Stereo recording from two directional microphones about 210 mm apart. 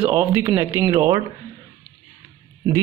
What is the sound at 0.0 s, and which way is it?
Speech, 10° right (ahead or behind).